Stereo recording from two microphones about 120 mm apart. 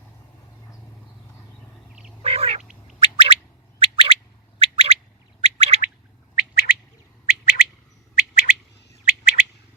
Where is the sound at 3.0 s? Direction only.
55° right (ahead or behind).